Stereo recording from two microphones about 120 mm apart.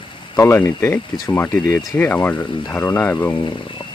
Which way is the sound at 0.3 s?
25° left (ahead or behind).